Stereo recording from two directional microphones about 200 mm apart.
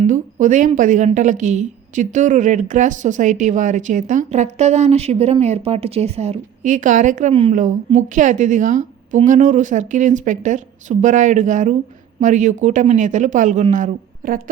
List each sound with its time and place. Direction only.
0.0 s a woman's voice: 40° right (ahead or behind)